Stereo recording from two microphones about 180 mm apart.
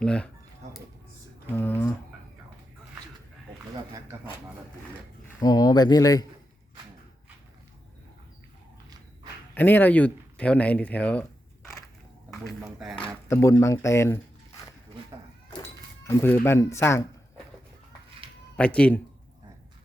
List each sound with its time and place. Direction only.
0.0 s speech: 5° left (ahead or behind)
0.6 s a sound: 40° right (ahead or behind)
1.5 s speech: 10° left (ahead or behind)
5.4 s speech: 20° left (ahead or behind)
9.6 s speech: 10° left (ahead or behind)
12.5 s speech: centre (ahead or behind)
13.2 s speech: 15° left (ahead or behind)
16.0 s speech: 15° left (ahead or behind)
18.5 s speech: 5° left (ahead or behind)